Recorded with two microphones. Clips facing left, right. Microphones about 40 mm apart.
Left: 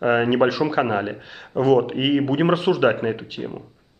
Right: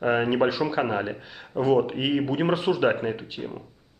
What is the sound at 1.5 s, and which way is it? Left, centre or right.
Speech, left.